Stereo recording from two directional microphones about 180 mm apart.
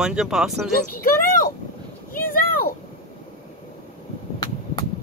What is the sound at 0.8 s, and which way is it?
Speech, 50° left (ahead or behind).